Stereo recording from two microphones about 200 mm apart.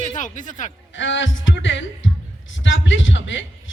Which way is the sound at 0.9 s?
65° left (ahead or behind).